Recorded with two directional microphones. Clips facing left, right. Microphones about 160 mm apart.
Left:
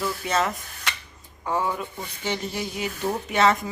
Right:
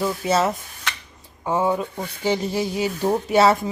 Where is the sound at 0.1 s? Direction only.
5° right (ahead or behind).